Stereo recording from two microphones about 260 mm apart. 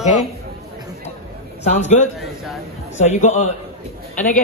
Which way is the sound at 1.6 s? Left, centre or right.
Left.